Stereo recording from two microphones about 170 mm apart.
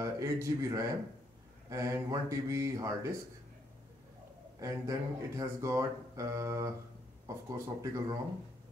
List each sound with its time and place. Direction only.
0.0 s speech: 15° right (ahead or behind)
4.6 s speech: 20° right (ahead or behind)